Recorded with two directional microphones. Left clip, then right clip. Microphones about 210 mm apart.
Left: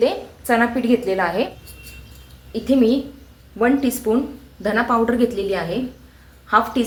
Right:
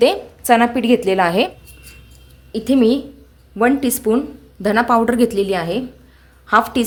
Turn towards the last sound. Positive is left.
turn(degrees=-60)  # may be behind; listen again after turning